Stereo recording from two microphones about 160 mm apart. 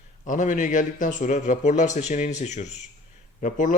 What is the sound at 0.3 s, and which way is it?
A man's voice, 50° left (ahead or behind).